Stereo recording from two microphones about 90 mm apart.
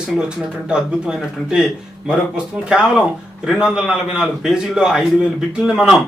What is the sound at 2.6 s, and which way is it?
Speech, 10° right (ahead or behind).